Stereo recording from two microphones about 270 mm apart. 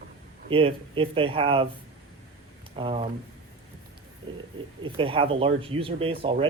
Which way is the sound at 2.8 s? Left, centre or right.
Centre.